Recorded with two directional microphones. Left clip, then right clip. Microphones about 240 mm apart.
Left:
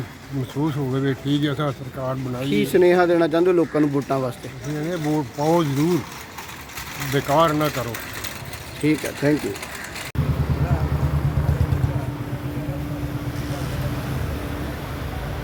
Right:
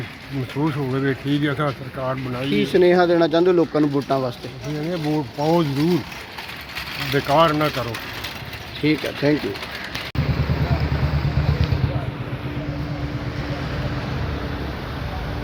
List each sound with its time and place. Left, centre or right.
0.6 s speech: centre
7.1 s speech: centre
8.8 s speech: centre